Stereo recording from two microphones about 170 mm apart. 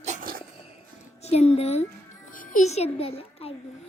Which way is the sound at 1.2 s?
40° left (ahead or behind).